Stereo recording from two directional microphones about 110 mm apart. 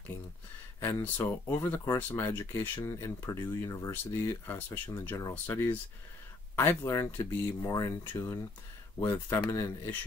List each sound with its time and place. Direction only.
0.7 s speech: 20° left (ahead or behind)